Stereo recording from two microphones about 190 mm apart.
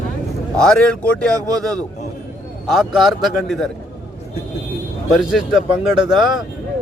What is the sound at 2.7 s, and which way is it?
Speech, centre (ahead or behind).